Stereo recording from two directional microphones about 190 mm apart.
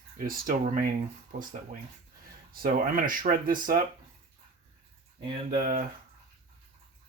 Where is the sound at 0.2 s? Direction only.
45° right (ahead or behind).